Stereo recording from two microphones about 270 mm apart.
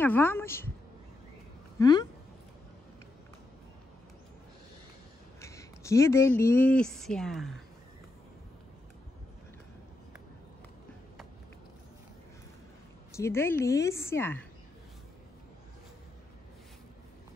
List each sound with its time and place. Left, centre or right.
0.0 s a woman's voice: centre
1.8 s a woman's voice: centre
5.4 s speech: centre
13.1 s a woman's voice: centre